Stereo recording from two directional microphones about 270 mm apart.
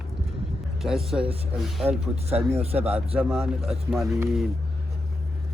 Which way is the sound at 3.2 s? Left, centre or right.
Centre.